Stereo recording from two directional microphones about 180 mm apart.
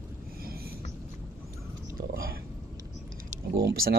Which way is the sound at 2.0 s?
55° right (ahead or behind).